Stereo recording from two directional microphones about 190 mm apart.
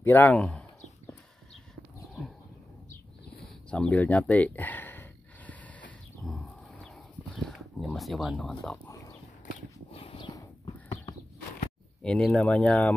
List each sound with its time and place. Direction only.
0.0 s speech: 10° left (ahead or behind)
3.4 s a sound: 5° left (ahead or behind)
7.4 s speech: centre (ahead or behind)
8.8 s horse: 15° left (ahead or behind)
9.9 s horse: 30° left (ahead or behind)
12.0 s speech: 5° left (ahead or behind)